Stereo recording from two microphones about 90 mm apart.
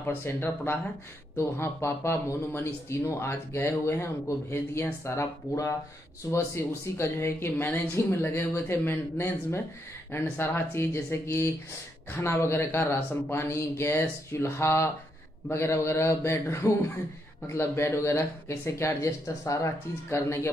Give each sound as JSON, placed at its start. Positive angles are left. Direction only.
{"t": 0.0, "sound": "a woman's voice", "side_deg": 25}